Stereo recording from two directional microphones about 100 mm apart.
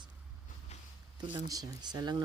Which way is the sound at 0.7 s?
90° left.